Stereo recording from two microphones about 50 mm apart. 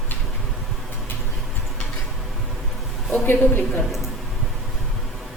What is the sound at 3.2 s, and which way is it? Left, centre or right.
Speech, left.